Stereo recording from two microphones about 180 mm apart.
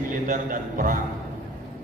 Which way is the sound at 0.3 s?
50° right (ahead or behind).